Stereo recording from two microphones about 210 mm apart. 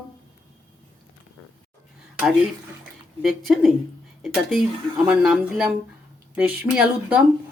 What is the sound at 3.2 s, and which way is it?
Speech, centre (ahead or behind).